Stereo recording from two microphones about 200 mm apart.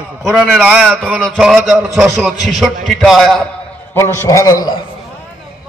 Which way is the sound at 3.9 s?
10° left (ahead or behind).